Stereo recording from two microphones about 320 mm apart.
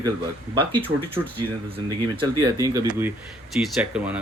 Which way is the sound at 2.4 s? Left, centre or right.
Centre.